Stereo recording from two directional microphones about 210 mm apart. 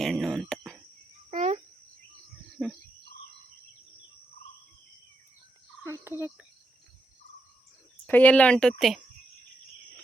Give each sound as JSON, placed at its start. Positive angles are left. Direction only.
{"t": 0.0, "sound": "a sound", "side_deg": 0}
{"t": 1.3, "sound": "cricket", "side_deg": -35}
{"t": 2.6, "sound": "cricket", "side_deg": 0}
{"t": 5.8, "sound": "cricket", "side_deg": -10}
{"t": 8.0, "sound": "a woman's voice", "side_deg": 10}